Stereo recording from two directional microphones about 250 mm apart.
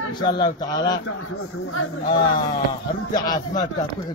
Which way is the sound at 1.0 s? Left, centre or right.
Left.